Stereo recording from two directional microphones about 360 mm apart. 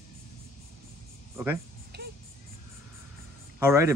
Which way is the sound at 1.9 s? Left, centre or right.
Right.